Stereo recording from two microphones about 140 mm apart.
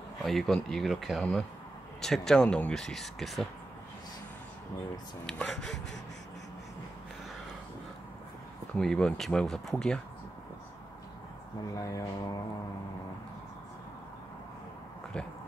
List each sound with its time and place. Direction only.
0.2 s speech: centre (ahead or behind)
5.2 s speech: centre (ahead or behind)
8.7 s speech: 5° left (ahead or behind)
11.7 s speech: 25° left (ahead or behind)